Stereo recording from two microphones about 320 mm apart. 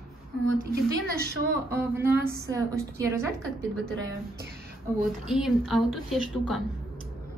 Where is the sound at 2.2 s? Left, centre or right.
Right.